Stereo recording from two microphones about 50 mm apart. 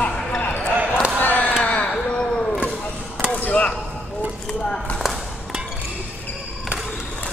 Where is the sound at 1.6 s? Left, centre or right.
Left.